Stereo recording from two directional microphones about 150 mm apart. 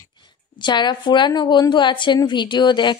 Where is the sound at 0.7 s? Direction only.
30° left (ahead or behind).